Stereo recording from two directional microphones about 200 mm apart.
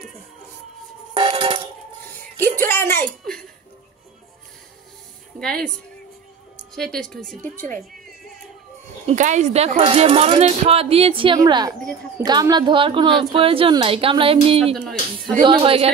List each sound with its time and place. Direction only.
1.1 s a sound: 25° right (ahead or behind)
2.6 s music: 10° left (ahead or behind)
5.4 s a woman's voice: 5° left (ahead or behind)
6.7 s a woman's voice: centre (ahead or behind)
9.0 s speech: 35° right (ahead or behind)
14.7 s speech: centre (ahead or behind)
15.4 s speech: 25° right (ahead or behind)